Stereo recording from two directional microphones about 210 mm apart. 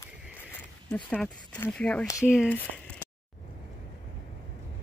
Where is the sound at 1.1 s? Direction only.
5° left (ahead or behind).